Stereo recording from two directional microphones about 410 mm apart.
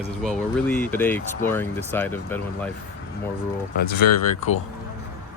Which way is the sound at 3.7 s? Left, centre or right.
Left.